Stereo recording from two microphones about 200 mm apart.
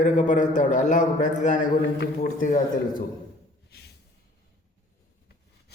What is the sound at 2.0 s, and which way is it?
A man's voice, 45° left (ahead or behind).